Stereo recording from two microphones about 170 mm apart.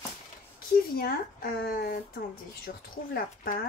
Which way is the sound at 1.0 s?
60° left (ahead or behind).